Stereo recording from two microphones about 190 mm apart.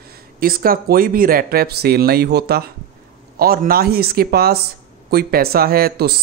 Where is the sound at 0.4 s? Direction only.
50° right (ahead or behind).